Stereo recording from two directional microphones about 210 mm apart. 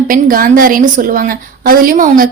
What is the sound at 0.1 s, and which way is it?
A woman's voice, 40° right (ahead or behind).